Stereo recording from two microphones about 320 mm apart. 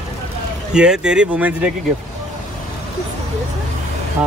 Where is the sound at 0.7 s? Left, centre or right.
Centre.